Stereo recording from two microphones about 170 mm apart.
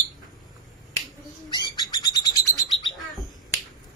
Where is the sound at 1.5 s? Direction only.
25° left (ahead or behind).